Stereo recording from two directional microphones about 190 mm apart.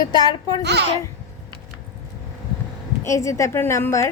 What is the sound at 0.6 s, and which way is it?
Speech, 60° right (ahead or behind).